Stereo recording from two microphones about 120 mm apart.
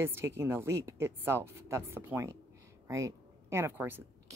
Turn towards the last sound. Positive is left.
turn(degrees=-20)  # may be behind; listen again after turning